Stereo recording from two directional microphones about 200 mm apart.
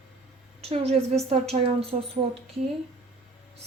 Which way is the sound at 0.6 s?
30° right (ahead or behind).